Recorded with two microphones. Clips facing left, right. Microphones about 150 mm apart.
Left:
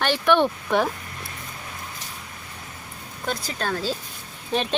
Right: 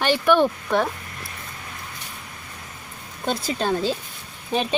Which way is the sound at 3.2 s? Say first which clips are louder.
Right 4 dB; 25° right (ahead or behind).